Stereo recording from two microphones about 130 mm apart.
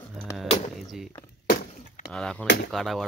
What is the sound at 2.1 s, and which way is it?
Speech, 5° left (ahead or behind).